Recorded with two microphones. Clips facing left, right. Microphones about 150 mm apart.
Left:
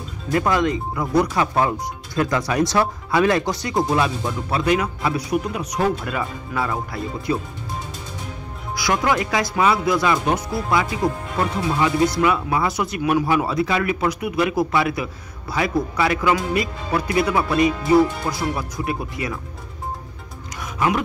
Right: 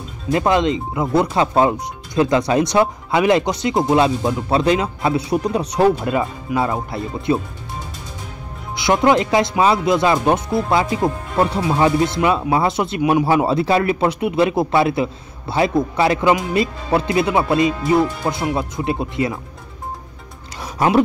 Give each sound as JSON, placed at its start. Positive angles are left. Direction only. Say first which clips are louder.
{"t": 0.3, "sound": "speech", "louder": "right 3 dB", "side_deg": -25}
{"t": 8.7, "sound": "speech", "louder": "right 6 dB", "side_deg": -25}
{"t": 20.6, "sound": "roaring cats", "louder": "right 5 dB", "side_deg": -30}